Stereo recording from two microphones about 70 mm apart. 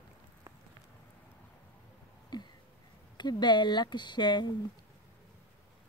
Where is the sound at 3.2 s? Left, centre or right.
Left.